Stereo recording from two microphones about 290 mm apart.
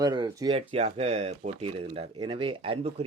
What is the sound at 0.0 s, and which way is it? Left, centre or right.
Speech, centre.